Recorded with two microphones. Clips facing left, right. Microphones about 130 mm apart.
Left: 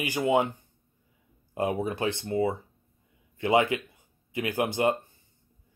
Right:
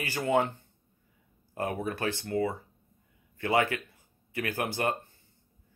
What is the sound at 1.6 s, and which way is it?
A man's voice, 20° left (ahead or behind).